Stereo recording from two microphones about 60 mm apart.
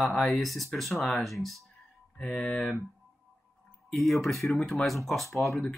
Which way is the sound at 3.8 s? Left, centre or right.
Centre.